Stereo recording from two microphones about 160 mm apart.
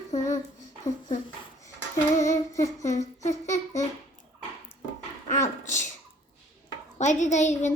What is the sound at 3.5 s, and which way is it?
Babbling, 45° left (ahead or behind).